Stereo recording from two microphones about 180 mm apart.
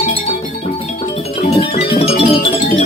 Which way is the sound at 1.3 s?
30° left (ahead or behind).